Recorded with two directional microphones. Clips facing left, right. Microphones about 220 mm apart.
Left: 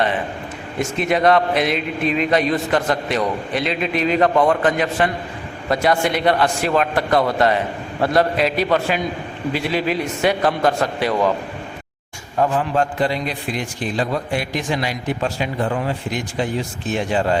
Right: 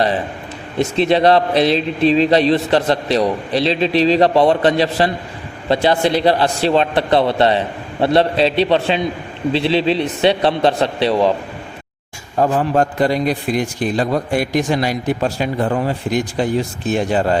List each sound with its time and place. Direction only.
0.8 s a man's voice: 30° right (ahead or behind)
12.4 s a man's voice: 40° right (ahead or behind)